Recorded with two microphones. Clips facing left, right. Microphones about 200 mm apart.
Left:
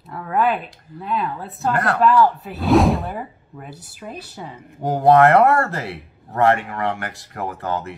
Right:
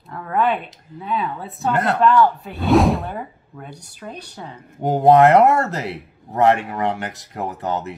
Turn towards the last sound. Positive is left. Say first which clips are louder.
# right 1 dB
turn(degrees=-20)  # may be behind; listen again after turning